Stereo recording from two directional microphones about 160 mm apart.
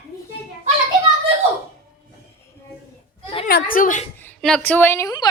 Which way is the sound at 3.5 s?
65° left (ahead or behind).